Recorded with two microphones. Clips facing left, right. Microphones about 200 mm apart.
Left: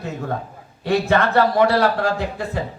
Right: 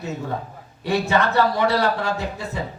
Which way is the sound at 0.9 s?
55° left (ahead or behind).